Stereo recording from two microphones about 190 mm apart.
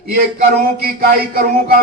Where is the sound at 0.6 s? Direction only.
55° right (ahead or behind).